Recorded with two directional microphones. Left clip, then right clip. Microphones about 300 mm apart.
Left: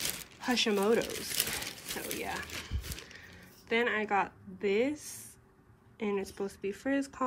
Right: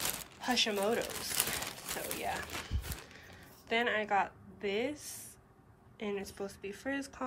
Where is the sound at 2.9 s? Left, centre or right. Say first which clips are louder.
Left 2 dB; centre.